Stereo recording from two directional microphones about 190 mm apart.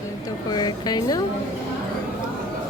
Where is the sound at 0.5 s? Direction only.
20° left (ahead or behind).